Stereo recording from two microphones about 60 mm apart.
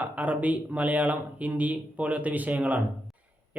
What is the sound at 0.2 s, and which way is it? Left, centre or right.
Speech, right.